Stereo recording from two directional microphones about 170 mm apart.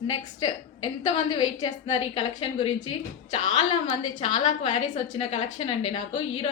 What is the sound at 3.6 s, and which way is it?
A woman's voice, 35° left (ahead or behind).